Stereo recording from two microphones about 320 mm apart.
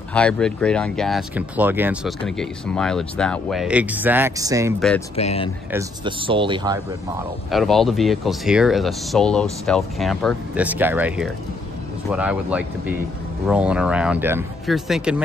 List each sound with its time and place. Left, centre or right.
0.1 s speech: centre
5.1 s speech: centre
5.7 s speech: centre
7.5 s speech: centre